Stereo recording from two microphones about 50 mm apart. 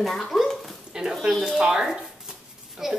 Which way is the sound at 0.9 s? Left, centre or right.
Centre.